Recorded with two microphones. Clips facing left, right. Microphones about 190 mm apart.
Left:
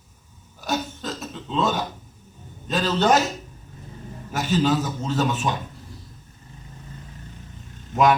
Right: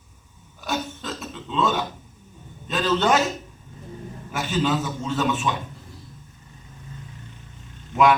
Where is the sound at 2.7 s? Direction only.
40° left (ahead or behind).